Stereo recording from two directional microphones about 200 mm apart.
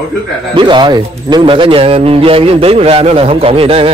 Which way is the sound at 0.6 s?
25° right (ahead or behind).